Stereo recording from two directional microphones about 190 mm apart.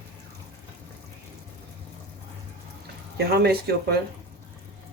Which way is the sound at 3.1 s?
60° right (ahead or behind).